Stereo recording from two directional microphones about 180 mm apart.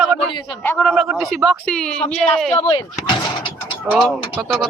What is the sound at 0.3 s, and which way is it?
Speech, 25° left (ahead or behind).